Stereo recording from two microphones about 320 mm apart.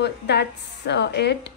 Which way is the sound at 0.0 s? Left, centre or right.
Left.